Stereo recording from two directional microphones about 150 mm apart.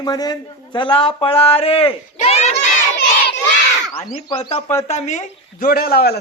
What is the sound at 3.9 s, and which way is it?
Speech, 40° left (ahead or behind).